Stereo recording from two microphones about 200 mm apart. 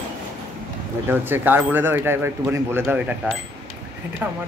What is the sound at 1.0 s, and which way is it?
Speech, 10° right (ahead or behind).